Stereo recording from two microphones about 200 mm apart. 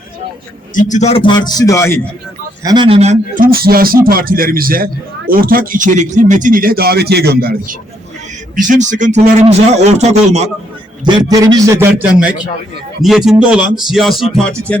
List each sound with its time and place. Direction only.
0.7 s a man's voice: 40° left (ahead or behind); by 2.0 s 15° left (ahead or behind)
2.6 s speech: 25° right (ahead or behind); by 7.7 s 50° right (ahead or behind)
8.5 s a man's voice: 40° right (ahead or behind)
11.0 s a man's voice: 20° right (ahead or behind); by 14.8 s 5° left (ahead or behind)